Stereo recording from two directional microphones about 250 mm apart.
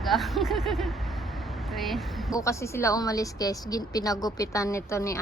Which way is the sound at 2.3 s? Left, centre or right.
Centre.